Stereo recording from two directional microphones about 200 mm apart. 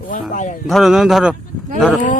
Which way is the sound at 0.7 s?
Centre (ahead or behind).